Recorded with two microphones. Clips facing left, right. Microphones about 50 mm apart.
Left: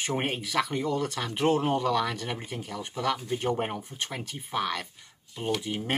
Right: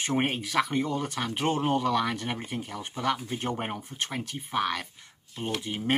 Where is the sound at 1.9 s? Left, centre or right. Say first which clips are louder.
Even; centre.